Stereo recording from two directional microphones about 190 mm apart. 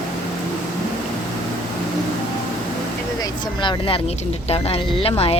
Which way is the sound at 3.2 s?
25° left (ahead or behind).